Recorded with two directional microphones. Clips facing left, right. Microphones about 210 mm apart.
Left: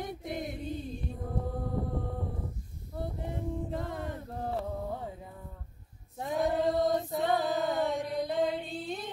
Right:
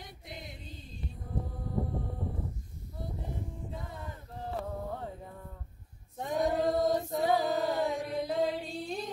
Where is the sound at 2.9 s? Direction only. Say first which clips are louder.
Left 4 dB; 65° left (ahead or behind).